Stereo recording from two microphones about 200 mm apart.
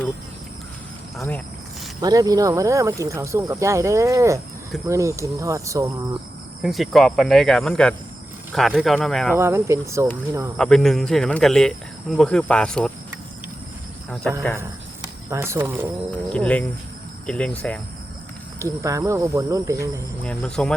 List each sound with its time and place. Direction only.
1.1 s speech: centre (ahead or behind)
2.0 s speech: 20° right (ahead or behind)
6.6 s speech: centre (ahead or behind)
9.3 s speech: 15° right (ahead or behind)
10.6 s speech: 5° left (ahead or behind)
14.3 s speech: 5° left (ahead or behind)
14.6 s speech: 15° right (ahead or behind)
16.3 s speech: 5° left (ahead or behind)
18.6 s speech: 15° right (ahead or behind)
20.2 s speech: 5° left (ahead or behind)